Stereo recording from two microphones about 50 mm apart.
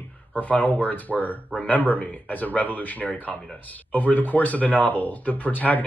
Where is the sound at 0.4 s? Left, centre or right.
Left.